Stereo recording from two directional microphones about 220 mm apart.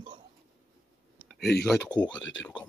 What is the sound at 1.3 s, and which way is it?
Speech, centre (ahead or behind).